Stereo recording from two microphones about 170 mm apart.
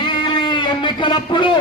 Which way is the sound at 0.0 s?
30° left (ahead or behind).